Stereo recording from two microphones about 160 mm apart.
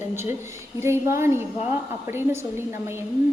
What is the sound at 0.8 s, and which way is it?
A woman's voice, 15° right (ahead or behind).